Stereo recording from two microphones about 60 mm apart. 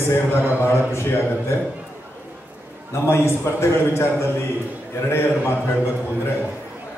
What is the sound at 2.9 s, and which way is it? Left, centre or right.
A man's voice, left.